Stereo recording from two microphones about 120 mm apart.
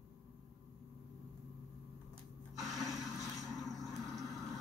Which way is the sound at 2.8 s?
30° left (ahead or behind).